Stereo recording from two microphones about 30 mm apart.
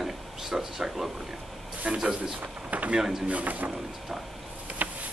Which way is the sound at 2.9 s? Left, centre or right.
Centre.